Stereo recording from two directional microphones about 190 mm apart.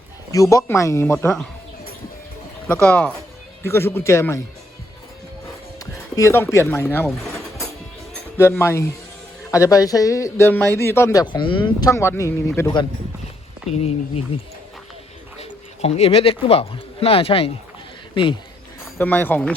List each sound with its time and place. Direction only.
0.3 s speech: 15° left (ahead or behind)
2.6 s speech: 10° left (ahead or behind)
5.8 s speech: 15° left (ahead or behind)
8.4 s speech: 15° left (ahead or behind)
15.4 s speech: 35° left (ahead or behind)
18.9 s speech: 10° left (ahead or behind)